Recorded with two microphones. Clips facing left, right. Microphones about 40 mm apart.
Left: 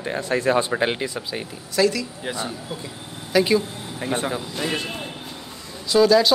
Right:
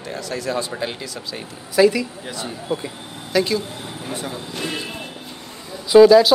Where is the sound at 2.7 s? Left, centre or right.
Right.